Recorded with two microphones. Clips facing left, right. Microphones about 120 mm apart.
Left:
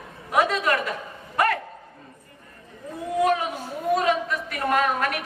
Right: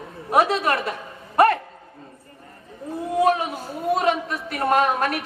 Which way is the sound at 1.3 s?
30° right (ahead or behind).